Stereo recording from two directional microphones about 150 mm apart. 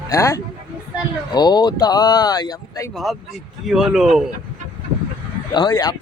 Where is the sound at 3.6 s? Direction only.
5° right (ahead or behind).